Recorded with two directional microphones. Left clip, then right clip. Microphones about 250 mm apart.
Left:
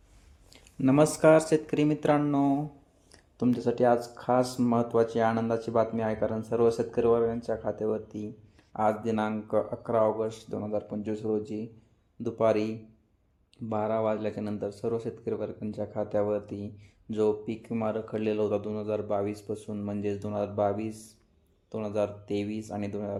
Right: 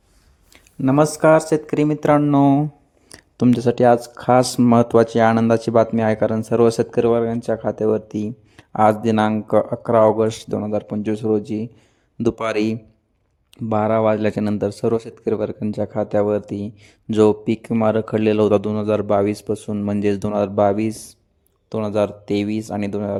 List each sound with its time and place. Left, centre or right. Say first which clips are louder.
0.5 s speech: right 7 dB; right